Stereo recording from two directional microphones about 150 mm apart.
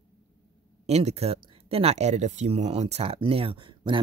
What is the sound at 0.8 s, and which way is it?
Speech, 45° right (ahead or behind).